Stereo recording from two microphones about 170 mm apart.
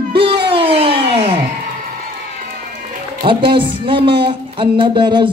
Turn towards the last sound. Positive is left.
turn(degrees=-30)  # may be behind; listen again after turning